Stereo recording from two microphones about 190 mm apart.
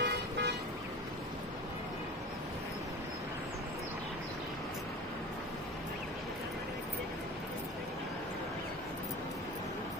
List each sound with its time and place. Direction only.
0.0 s toot: 65° right (ahead or behind)